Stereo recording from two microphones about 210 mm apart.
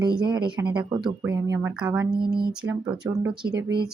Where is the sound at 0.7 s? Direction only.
5° right (ahead or behind).